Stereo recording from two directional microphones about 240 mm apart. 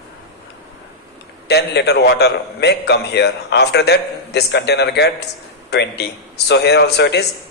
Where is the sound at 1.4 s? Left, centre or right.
Left.